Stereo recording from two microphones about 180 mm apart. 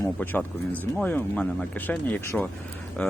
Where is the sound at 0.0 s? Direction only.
10° left (ahead or behind).